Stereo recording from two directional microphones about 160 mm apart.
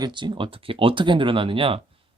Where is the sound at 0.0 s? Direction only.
30° right (ahead or behind).